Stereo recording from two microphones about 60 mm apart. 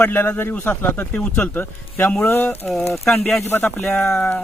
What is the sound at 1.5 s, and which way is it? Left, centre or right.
Speech, left.